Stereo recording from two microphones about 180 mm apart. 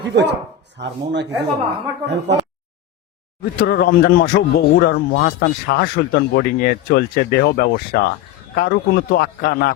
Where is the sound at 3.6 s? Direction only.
60° left (ahead or behind).